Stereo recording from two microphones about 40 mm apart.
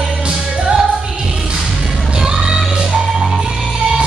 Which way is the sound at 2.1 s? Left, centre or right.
Centre.